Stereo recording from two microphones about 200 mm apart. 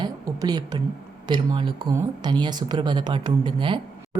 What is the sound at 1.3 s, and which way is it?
A woman's voice, 25° right (ahead or behind).